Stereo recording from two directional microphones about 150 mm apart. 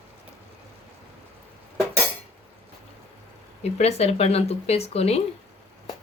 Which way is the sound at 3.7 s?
45° left (ahead or behind).